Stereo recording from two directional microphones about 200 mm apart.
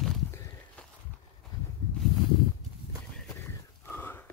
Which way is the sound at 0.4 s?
10° left (ahead or behind).